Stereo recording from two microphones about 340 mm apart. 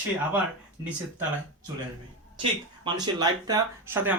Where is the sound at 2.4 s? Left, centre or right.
Centre.